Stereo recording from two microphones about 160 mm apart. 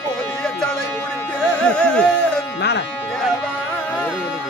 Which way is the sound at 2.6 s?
90° left.